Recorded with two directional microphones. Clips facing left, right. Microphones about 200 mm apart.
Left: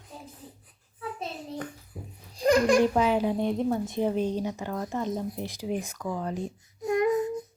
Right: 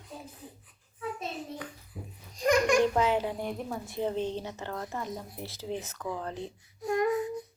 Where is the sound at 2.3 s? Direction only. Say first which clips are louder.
Left 3 dB; 30° left (ahead or behind).